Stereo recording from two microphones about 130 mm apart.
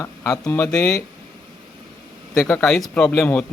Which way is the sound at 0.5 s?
20° left (ahead or behind).